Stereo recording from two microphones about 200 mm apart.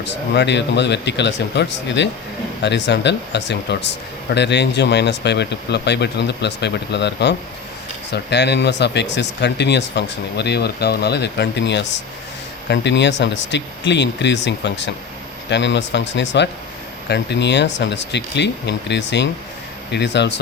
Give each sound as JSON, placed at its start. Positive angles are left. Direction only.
{"t": 0.0, "sound": "speech", "side_deg": 60}